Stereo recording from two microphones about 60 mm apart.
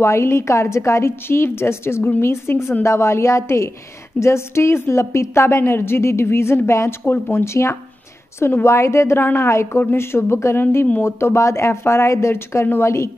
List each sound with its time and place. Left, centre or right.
0.0 s a woman's voice: left